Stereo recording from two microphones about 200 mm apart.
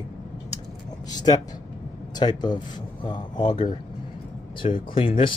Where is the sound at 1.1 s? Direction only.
20° left (ahead or behind).